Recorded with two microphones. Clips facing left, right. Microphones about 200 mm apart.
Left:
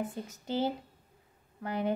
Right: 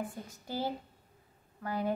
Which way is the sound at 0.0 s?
20° left (ahead or behind).